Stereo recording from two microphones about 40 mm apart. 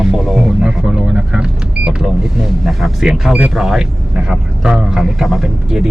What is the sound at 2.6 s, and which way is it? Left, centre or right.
Speech, centre.